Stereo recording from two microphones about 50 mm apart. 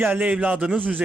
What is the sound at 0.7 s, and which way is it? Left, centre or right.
Speech, right.